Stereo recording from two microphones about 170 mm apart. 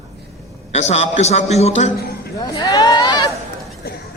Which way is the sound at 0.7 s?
40° left (ahead or behind).